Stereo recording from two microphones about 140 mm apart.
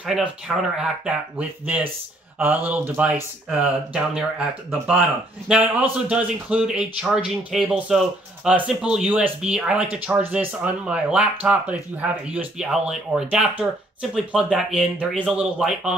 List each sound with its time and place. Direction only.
0.0 s speech: 5° right (ahead or behind)
5.5 s speech: 10° right (ahead or behind)